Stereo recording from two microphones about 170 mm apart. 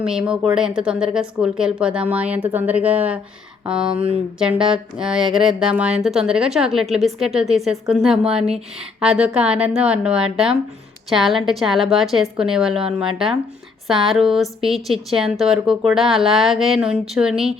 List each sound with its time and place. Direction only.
0.0 s speech: 5° right (ahead or behind)
3.9 s speech: 35° right (ahead or behind)
4.4 s a woman's voice: 5° right (ahead or behind)